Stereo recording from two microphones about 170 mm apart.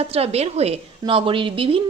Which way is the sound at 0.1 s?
35° right (ahead or behind).